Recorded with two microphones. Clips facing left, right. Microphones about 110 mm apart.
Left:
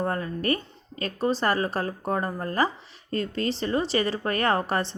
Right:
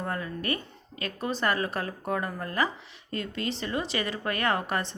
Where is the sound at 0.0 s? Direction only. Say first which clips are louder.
Left 5 dB; 35° left (ahead or behind).